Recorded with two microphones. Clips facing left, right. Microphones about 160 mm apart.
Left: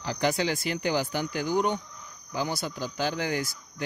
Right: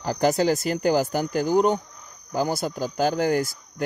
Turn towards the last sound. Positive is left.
turn(degrees=-45)  # may be behind; listen again after turning